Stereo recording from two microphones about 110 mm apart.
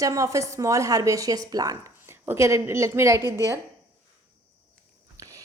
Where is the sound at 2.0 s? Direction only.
20° right (ahead or behind).